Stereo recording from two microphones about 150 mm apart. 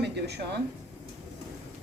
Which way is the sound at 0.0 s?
90° right.